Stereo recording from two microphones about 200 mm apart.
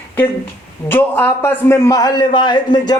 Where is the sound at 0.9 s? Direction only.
10° left (ahead or behind).